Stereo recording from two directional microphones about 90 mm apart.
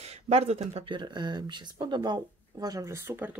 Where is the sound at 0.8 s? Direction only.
60° right (ahead or behind); by 3.3 s 25° right (ahead or behind).